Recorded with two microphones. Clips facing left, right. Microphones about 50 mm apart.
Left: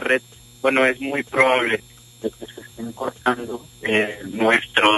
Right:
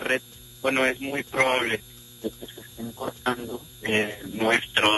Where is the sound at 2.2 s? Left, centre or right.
Left.